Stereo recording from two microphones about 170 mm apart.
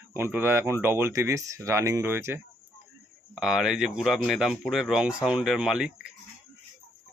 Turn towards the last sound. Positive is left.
turn(degrees=-5)  # may be behind; listen again after turning